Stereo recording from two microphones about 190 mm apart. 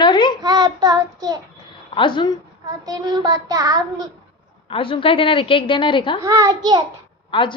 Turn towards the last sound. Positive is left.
turn(degrees=25)  # may be behind; listen again after turning